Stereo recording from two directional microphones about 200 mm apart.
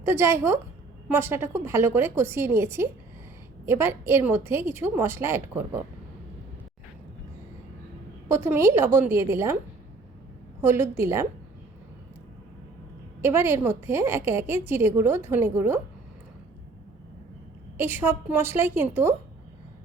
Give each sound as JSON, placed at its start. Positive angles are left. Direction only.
{"t": 0.0, "sound": "a woman's voice", "side_deg": -10}
{"t": 8.3, "sound": "a woman's voice", "side_deg": -15}
{"t": 10.6, "sound": "a woman's voice", "side_deg": -10}
{"t": 13.2, "sound": "a woman's voice", "side_deg": -10}
{"t": 17.7, "sound": "a woman's voice", "side_deg": -10}